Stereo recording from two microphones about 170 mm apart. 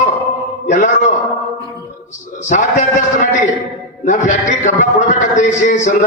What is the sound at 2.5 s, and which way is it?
Speech, 45° left (ahead or behind).